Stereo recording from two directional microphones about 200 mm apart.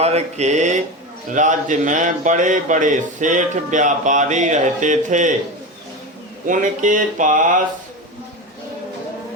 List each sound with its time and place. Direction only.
0.0 s speech: 35° right (ahead or behind)
6.5 s speech: 40° right (ahead or behind)